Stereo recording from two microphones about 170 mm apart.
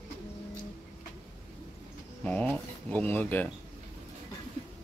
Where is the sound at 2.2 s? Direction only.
10° left (ahead or behind).